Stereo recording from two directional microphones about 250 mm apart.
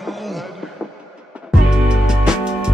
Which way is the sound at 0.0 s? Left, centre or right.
Centre.